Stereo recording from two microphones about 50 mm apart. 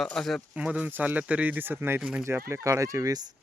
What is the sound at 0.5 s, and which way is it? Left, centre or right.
Speech, right.